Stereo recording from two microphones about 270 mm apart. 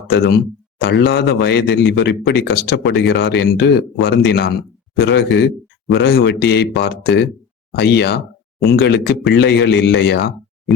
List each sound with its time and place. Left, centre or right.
0.1 s a man's voice: left